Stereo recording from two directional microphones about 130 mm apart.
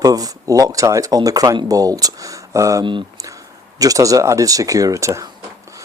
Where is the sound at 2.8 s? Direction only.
40° right (ahead or behind).